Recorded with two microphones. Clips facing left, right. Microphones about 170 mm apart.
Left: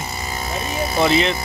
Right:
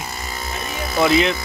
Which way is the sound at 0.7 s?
30° left (ahead or behind).